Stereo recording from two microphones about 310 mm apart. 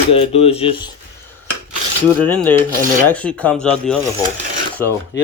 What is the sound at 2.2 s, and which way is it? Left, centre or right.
Speech, centre.